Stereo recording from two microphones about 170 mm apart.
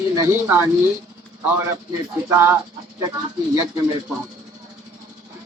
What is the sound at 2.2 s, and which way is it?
Speech, 15° right (ahead or behind).